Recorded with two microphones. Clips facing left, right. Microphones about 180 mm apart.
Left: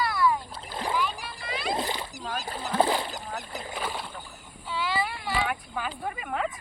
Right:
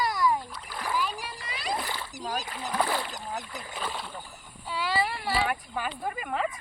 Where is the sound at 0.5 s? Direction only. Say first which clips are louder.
Left 2 dB; 25° left (ahead or behind).